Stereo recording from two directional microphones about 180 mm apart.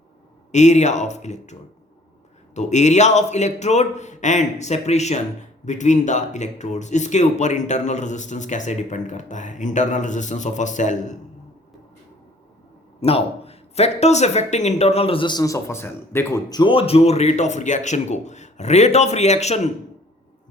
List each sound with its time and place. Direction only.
0.5 s a man's voice: 40° left (ahead or behind)
2.6 s a man's voice: 40° left (ahead or behind)
13.0 s a man's voice: 35° left (ahead or behind)